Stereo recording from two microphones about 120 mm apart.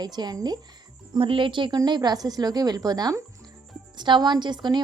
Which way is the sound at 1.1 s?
45° right (ahead or behind).